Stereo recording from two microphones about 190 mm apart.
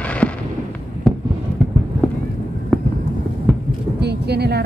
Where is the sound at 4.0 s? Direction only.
60° right (ahead or behind).